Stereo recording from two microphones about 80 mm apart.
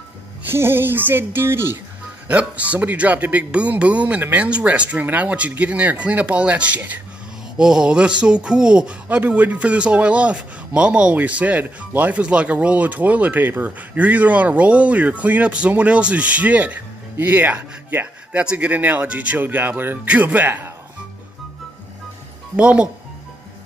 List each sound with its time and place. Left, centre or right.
0.5 s speech: right
2.2 s speech: centre
7.5 s speech: centre; by 20.7 s right
22.6 s speech: centre